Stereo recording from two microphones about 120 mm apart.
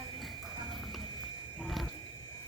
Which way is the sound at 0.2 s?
Centre (ahead or behind).